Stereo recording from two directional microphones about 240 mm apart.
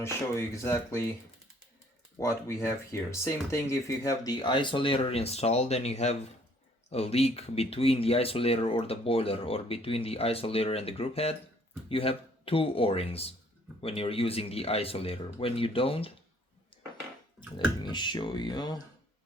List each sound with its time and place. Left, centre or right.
0.0 s speech: centre
2.1 s speech: centre
17.4 s bathtub: centre
17.8 s speech: centre